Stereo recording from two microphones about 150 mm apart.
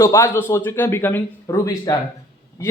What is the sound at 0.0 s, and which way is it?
A man's voice, 20° left (ahead or behind).